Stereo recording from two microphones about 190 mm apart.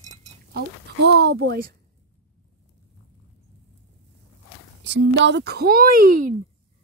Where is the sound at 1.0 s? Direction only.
60° right (ahead or behind).